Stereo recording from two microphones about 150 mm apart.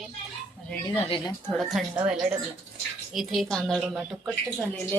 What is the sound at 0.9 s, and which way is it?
Speech, 40° left (ahead or behind).